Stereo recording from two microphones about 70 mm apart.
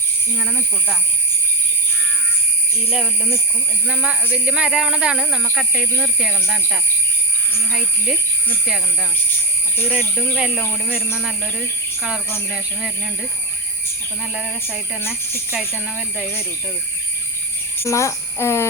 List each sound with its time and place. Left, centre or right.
4.0 s speech: centre
10.3 s speech: centre
10.6 s speech: left
12.5 s speech: centre
14.3 s speech: centre
15.0 s speech: left
16.0 s speech: centre
17.8 s speech: left